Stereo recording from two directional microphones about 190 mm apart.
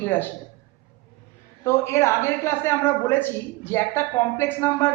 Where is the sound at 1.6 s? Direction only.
15° left (ahead or behind).